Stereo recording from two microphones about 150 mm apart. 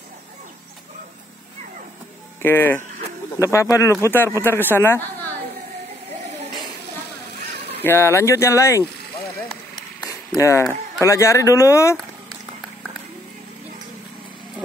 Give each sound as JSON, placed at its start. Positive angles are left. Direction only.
{"t": 2.4, "sound": "speech", "side_deg": 15}
{"t": 7.8, "sound": "speech", "side_deg": 15}
{"t": 9.9, "sound": "a sound", "side_deg": 25}
{"t": 11.1, "sound": "speech", "side_deg": 20}